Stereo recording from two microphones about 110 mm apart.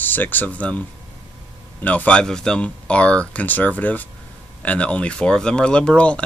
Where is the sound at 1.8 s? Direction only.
15° left (ahead or behind).